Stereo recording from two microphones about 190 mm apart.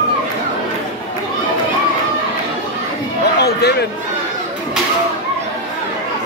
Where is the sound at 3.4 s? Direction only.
60° left (ahead or behind).